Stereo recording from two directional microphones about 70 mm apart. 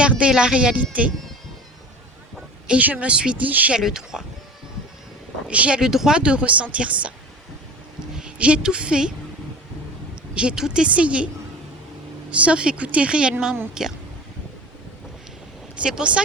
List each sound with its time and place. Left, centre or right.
0.0 s speech: centre
2.6 s speech: right
3.8 s speech: centre
5.5 s speech: centre
8.1 s a woman's voice: centre
10.3 s speech: centre
12.3 s speech: centre
15.8 s speech: centre